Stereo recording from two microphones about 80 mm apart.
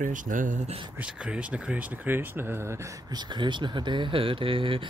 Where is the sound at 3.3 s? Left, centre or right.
Right.